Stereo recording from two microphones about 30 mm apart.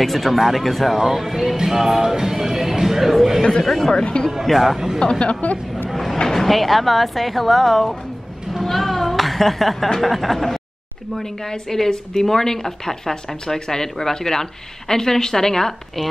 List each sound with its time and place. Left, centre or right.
0.0 s speech: centre
0.9 s speech: centre
3.6 s a woman's voice: centre
3.9 s speech: left
4.3 s speech: centre
5.0 s speech: left
5.4 s speech: left
6.2 s speech: centre
8.6 s a sound: centre
9.8 s a woman's voice: centre